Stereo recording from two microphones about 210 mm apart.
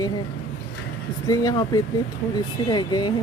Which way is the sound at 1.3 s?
15° left (ahead or behind).